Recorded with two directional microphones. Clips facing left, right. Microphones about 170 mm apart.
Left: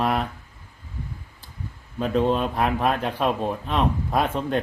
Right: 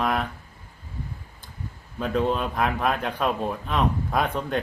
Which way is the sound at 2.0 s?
Centre (ahead or behind).